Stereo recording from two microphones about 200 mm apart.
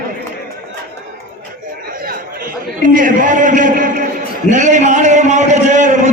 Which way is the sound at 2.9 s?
40° right (ahead or behind).